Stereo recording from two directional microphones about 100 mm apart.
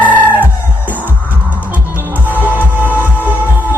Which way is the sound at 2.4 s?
15° right (ahead or behind).